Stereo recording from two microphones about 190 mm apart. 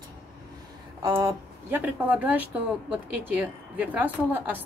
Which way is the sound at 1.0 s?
20° right (ahead or behind).